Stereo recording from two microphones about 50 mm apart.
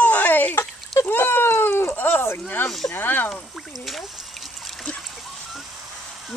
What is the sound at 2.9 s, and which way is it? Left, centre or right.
Speech, left.